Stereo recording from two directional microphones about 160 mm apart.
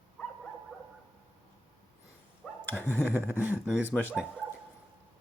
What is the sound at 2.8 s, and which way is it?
Speech, 10° left (ahead or behind).